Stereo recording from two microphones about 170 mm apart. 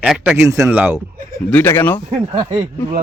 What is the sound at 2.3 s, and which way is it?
Speech, 30° right (ahead or behind).